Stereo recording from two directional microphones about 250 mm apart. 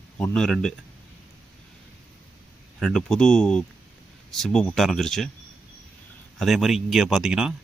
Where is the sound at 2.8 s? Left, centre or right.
Centre.